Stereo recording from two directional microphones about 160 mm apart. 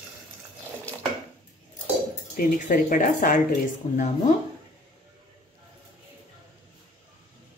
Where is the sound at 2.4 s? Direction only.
55° left (ahead or behind).